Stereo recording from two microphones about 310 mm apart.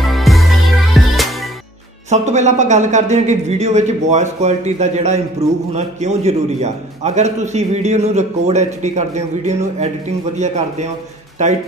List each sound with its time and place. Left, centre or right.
0.0 s music: centre
2.0 s a man's voice: right